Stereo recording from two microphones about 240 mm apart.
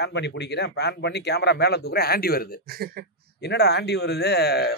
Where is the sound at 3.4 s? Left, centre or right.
Left.